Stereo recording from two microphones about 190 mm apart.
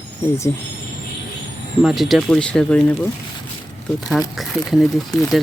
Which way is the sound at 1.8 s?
Centre (ahead or behind).